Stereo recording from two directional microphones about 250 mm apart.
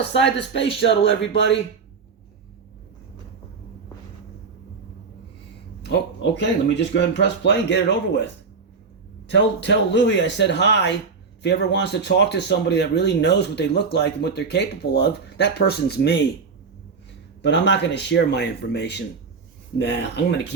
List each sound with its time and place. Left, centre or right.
0.2 s speech: left
5.8 s speech: left
17.4 s speech: left